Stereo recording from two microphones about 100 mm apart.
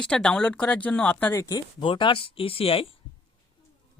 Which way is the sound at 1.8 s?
60° left (ahead or behind).